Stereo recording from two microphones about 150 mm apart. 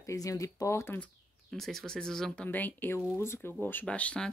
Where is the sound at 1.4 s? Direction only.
Centre (ahead or behind).